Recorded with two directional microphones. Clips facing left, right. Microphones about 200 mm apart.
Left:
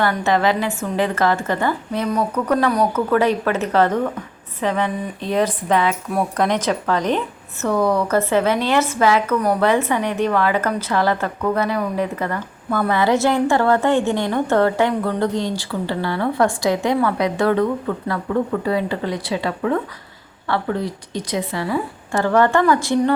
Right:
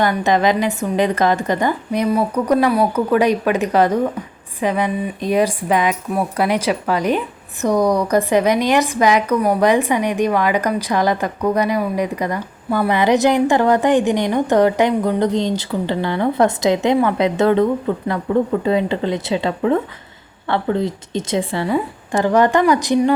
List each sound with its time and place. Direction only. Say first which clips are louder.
0.0 s a woman's voice: right 2 dB; 15° right (ahead or behind)